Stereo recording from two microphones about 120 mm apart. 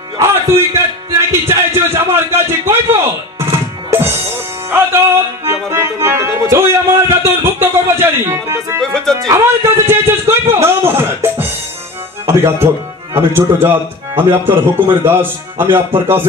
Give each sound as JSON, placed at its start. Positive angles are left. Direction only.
{"t": 0.2, "sound": "music", "side_deg": -25}
{"t": 1.1, "sound": "a sound", "side_deg": -20}
{"t": 4.6, "sound": "music", "side_deg": -20}
{"t": 6.7, "sound": "a sound", "side_deg": -20}
{"t": 7.6, "sound": "music", "side_deg": -20}
{"t": 8.8, "sound": "music", "side_deg": 5}
{"t": 9.3, "sound": "music", "side_deg": -20}
{"t": 12.3, "sound": "a man's voice", "side_deg": -20}